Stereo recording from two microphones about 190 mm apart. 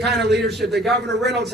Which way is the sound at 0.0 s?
60° right (ahead or behind).